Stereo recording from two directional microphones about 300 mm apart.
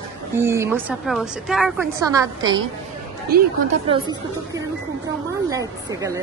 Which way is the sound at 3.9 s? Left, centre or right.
Centre.